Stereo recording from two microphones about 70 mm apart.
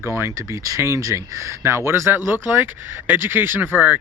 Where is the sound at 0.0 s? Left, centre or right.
Right.